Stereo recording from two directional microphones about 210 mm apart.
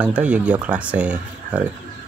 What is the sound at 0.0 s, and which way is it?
Speech, 5° right (ahead or behind).